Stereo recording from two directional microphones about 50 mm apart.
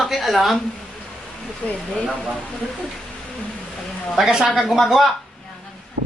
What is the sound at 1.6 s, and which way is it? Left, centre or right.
Speech, centre.